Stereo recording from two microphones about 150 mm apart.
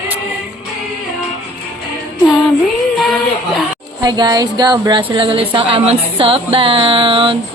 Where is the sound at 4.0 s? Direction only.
25° right (ahead or behind).